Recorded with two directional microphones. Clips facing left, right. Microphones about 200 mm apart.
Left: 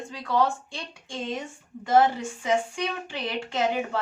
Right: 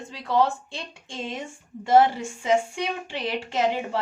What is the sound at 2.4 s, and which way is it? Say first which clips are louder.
Speech: right 3 dB; 25° right (ahead or behind).